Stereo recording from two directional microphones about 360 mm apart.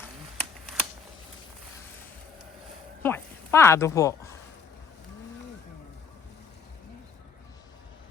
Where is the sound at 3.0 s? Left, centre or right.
Centre.